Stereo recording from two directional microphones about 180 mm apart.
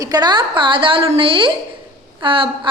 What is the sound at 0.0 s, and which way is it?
A woman's voice, 20° right (ahead or behind).